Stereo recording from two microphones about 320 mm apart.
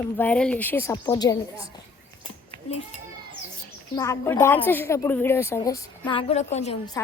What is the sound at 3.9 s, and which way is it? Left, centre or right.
A woman's voice, centre.